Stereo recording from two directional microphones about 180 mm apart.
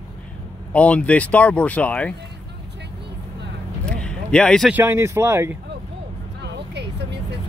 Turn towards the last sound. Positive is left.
turn(degrees=-70)  # may be behind; listen again after turning